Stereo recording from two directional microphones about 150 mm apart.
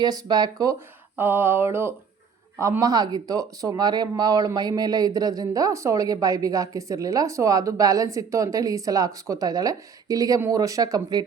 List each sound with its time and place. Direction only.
0.0 s speech: 25° right (ahead or behind)
1.1 s a sound: 15° right (ahead or behind)
2.6 s speech: 20° right (ahead or behind)